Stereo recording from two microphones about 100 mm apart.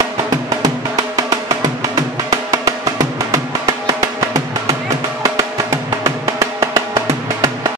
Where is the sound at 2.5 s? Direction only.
35° right (ahead or behind).